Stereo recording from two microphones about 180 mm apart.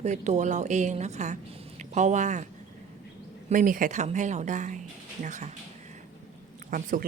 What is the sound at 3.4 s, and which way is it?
A woman's voice, 50° right (ahead or behind).